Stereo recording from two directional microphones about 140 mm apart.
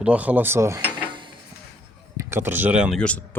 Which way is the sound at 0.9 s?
35° right (ahead or behind).